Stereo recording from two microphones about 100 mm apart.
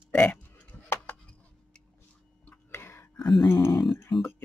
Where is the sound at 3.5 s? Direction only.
25° left (ahead or behind).